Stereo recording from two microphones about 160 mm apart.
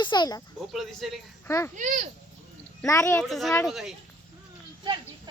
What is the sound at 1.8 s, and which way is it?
Speech, 50° right (ahead or behind).